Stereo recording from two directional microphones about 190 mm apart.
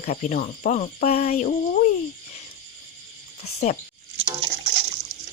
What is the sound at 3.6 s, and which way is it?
Speech, 35° left (ahead or behind).